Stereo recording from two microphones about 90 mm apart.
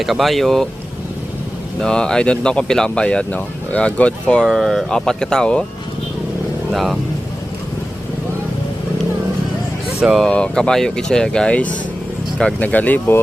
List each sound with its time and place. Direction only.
0.0 s speech: centre (ahead or behind)
1.8 s speech: 10° left (ahead or behind)
10.0 s speech: 5° right (ahead or behind)
10.2 s speech: 10° left (ahead or behind)